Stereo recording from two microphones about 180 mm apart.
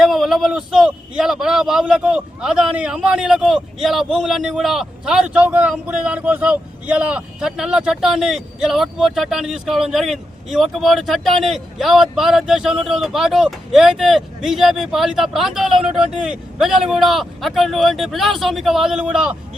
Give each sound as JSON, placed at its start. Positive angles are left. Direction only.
{"t": 0.0, "sound": "a man's voice", "side_deg": 0}